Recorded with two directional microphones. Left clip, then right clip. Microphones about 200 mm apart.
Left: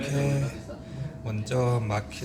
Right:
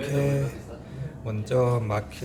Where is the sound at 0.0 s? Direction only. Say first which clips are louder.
Right 3 dB; 10° right (ahead or behind).